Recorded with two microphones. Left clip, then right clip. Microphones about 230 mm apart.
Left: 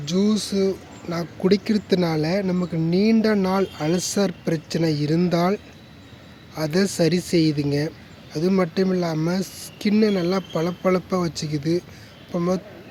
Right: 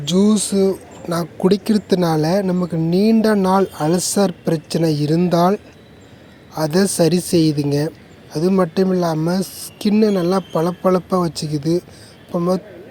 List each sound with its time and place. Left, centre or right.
0.0 s speech: centre